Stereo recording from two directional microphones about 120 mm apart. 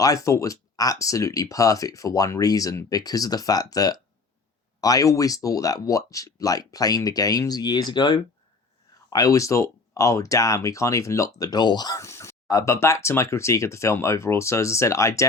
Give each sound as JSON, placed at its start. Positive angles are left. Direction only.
{"t": 0.0, "sound": "speech", "side_deg": 30}